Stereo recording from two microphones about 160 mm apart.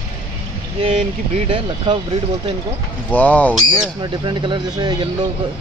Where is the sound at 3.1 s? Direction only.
10° left (ahead or behind).